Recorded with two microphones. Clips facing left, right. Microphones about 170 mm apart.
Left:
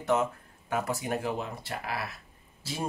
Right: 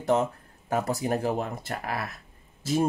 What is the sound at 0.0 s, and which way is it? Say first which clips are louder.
Speech: right 3 dB; 35° right (ahead or behind).